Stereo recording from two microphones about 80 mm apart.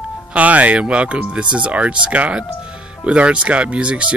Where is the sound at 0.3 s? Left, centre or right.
Centre.